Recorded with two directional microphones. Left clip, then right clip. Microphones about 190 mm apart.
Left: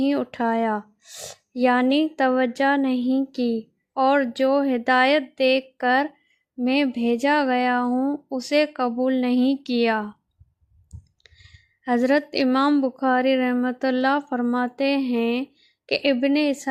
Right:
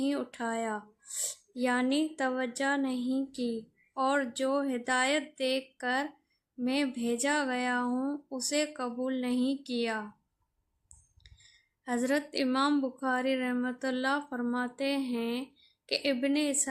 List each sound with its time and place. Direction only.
0.0 s a woman's voice: 35° left (ahead or behind)
11.2 s a woman's voice: 40° left (ahead or behind)